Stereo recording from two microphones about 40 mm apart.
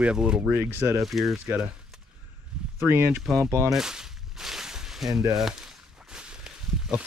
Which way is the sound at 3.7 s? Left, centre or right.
Centre.